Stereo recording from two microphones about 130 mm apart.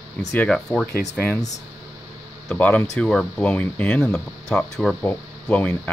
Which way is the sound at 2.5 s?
10° left (ahead or behind).